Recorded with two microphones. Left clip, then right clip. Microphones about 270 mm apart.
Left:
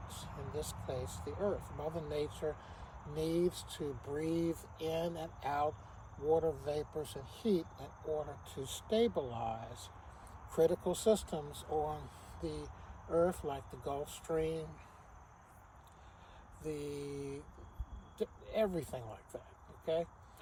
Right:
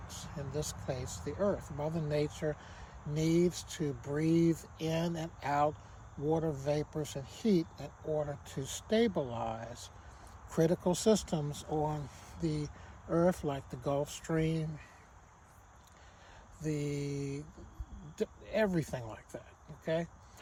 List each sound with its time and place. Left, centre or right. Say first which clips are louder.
0.1 s speech: right 3 dB; right
16.6 s speech: right 4 dB; right